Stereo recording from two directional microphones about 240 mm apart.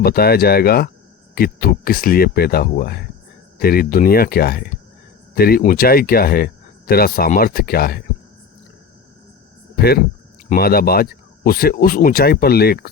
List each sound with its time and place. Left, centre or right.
0.0 s speech: left
9.7 s speech: left